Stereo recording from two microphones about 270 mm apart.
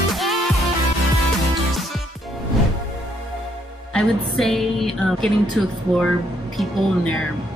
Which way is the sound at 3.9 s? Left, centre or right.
Centre.